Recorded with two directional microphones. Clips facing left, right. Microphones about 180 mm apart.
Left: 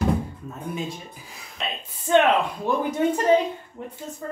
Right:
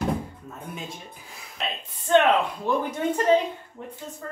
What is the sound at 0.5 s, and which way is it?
Music, centre (ahead or behind).